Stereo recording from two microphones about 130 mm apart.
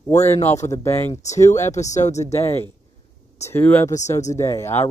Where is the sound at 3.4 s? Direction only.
15° left (ahead or behind).